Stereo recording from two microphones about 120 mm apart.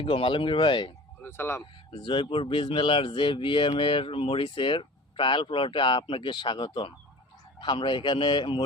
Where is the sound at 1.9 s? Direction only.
45° left (ahead or behind).